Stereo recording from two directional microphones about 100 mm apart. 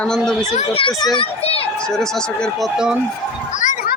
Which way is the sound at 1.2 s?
80° left.